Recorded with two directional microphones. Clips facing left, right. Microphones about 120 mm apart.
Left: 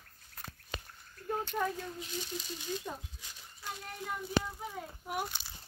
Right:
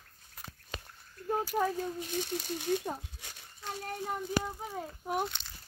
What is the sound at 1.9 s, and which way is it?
Speech, 55° right (ahead or behind).